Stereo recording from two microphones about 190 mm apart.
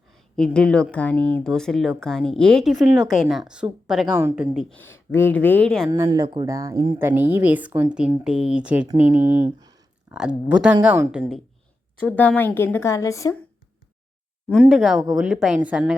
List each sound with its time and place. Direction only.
0.1 s speech: 5° left (ahead or behind)
4.2 s speech: 15° right (ahead or behind)
4.5 s speech: 10° left (ahead or behind)
5.9 s speech: 20° right (ahead or behind)
10.1 s speech: 5° right (ahead or behind)
12.0 s speech: 10° left (ahead or behind)
14.5 s speech: centre (ahead or behind)